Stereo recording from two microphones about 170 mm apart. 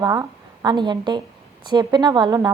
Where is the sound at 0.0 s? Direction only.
20° right (ahead or behind).